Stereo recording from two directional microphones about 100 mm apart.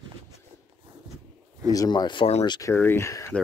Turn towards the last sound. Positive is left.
turn(degrees=30)  # may be behind; listen again after turning